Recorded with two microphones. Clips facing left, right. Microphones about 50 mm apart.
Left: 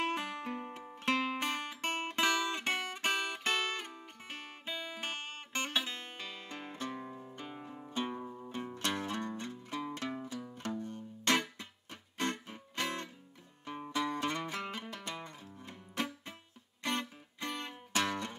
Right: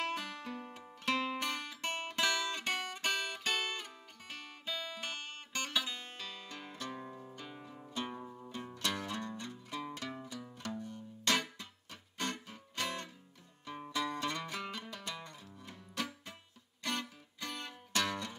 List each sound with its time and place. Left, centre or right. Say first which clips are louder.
0.0 s music: left 3 dB; left; by 7.3 s centre
7.3 s music: left 3 dB; left
8.2 s music: left 3 dB; centre
8.7 s music: left 1 dB; left